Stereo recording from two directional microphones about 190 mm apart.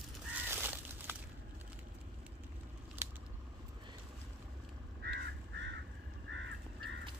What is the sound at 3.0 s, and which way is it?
Scissors, 10° right (ahead or behind).